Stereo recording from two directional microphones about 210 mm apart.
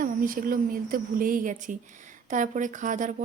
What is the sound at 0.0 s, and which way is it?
A woman's voice, 40° right (ahead or behind).